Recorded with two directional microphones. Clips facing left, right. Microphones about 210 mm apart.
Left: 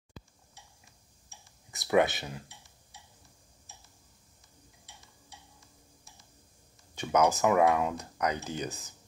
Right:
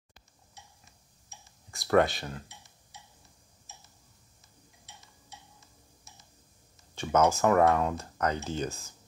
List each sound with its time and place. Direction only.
1.3 s clicking: 20° right (ahead or behind)
1.7 s speech: 15° left (ahead or behind)
4.9 s tick-tock: 20° right (ahead or behind)
5.3 s a sound: 20° right (ahead or behind)
7.0 s speech: 15° left (ahead or behind)